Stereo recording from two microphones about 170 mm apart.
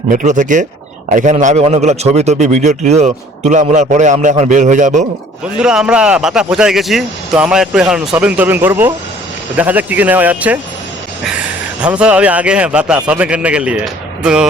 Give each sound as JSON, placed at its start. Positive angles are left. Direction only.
{"t": 0.1, "sound": "a man's voice", "side_deg": -50}
{"t": 5.5, "sound": "a man's voice", "side_deg": -5}